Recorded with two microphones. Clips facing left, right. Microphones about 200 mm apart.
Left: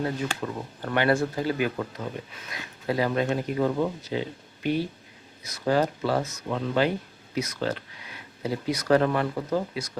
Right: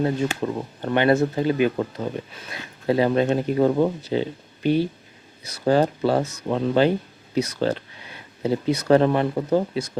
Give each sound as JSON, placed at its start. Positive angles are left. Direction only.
{"t": 0.0, "sound": "speech", "side_deg": -25}